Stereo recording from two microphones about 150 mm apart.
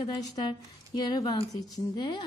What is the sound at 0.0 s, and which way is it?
A woman's voice, 30° left (ahead or behind).